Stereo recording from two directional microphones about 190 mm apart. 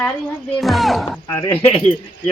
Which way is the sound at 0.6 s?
Centre (ahead or behind).